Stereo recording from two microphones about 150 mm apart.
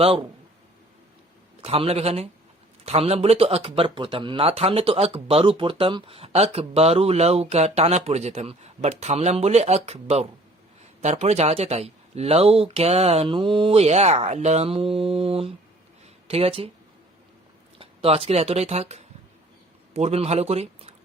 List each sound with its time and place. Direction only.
0.0 s a man's voice: 40° right (ahead or behind)
1.6 s speech: 40° right (ahead or behind)
17.7 s a man's voice: 40° right (ahead or behind)